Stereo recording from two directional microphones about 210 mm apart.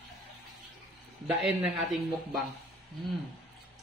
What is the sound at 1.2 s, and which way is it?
Speech, 5° right (ahead or behind).